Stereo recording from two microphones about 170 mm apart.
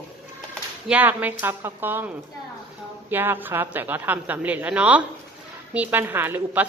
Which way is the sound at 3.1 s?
10° right (ahead or behind).